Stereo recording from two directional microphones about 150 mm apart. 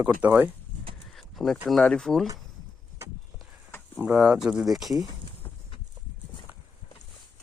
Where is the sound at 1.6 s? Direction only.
5° left (ahead or behind).